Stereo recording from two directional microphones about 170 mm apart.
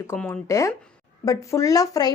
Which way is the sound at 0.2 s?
15° left (ahead or behind).